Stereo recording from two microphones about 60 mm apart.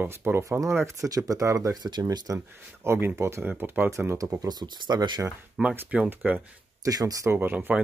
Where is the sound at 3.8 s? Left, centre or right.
Right.